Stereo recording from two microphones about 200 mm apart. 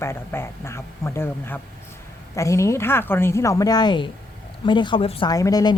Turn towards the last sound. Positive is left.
turn(degrees=20)  # may be behind; listen again after turning